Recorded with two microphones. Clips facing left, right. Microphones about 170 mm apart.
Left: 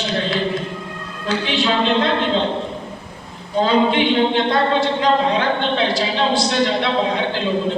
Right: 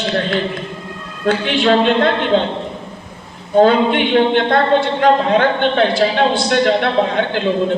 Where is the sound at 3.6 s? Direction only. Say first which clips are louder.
Right 4 dB; 55° right (ahead or behind).